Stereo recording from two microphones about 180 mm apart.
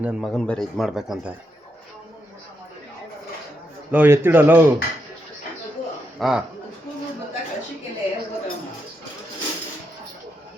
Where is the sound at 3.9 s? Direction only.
10° right (ahead or behind).